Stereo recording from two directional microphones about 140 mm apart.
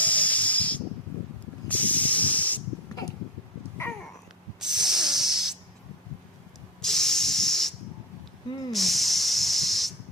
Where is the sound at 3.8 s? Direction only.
20° left (ahead or behind).